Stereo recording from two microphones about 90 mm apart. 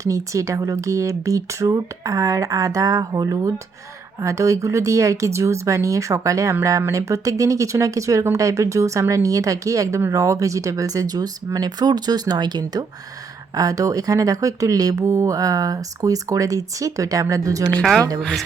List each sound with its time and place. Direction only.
0.0 s speech: 35° right (ahead or behind)
18.2 s speech: 5° left (ahead or behind)